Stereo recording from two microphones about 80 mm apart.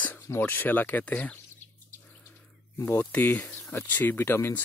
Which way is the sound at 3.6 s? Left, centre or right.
Left.